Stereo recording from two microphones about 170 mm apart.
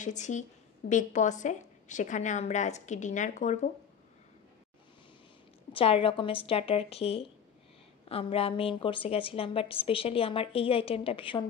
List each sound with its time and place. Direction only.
0.0 s a woman's voice: 45° left (ahead or behind)
5.7 s a woman's voice: 30° left (ahead or behind)